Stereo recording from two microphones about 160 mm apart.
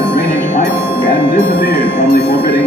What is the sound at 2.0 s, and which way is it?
Speech, 80° left.